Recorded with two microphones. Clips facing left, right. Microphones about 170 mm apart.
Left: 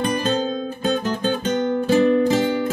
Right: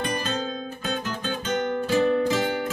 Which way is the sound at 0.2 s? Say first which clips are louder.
Left 7 dB; 30° left (ahead or behind).